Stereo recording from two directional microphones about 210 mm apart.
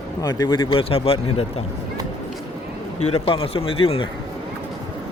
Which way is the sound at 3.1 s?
25° left (ahead or behind).